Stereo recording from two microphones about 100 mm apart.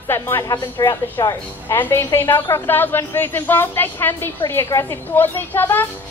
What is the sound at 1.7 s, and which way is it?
A woman's voice, 20° left (ahead or behind).